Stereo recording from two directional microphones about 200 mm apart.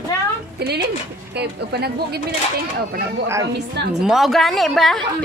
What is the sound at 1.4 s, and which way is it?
Speech, 55° right (ahead or behind).